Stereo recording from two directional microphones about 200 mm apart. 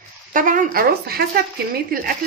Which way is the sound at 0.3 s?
40° right (ahead or behind).